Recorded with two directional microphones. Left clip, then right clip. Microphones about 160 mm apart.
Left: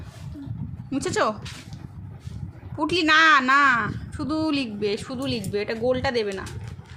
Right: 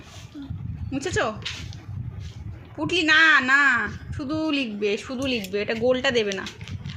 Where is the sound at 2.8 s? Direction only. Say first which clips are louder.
Even; 15° left (ahead or behind).